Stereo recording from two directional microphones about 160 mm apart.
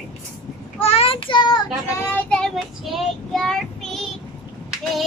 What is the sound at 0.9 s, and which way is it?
Child singing, 35° left (ahead or behind).